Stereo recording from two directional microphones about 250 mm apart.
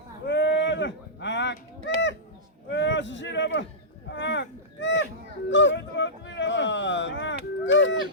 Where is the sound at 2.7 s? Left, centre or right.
Left.